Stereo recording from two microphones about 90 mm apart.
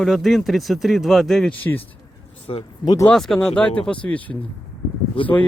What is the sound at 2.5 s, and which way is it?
Speech, 65° left (ahead or behind).